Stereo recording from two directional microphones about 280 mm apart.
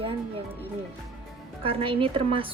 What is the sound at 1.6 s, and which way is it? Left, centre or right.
Speech, centre.